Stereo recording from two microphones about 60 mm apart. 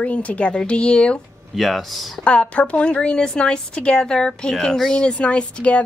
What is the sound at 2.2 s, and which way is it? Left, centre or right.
A woman's voice, centre.